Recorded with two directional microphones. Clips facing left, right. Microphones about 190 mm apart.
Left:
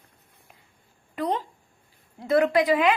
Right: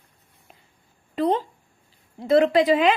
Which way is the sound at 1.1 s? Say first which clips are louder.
Right 5 dB; 30° right (ahead or behind).